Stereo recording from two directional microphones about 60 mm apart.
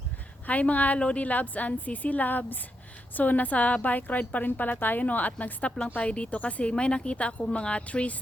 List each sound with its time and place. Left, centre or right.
0.4 s a woman's voice: left